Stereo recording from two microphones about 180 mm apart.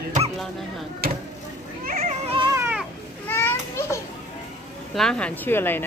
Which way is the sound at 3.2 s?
10° left (ahead or behind).